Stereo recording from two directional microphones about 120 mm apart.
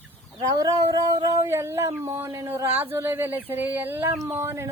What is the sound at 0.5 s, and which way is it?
Speech, 30° right (ahead or behind).